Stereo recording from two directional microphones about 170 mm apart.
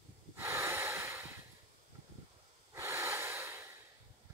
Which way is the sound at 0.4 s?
15° right (ahead or behind).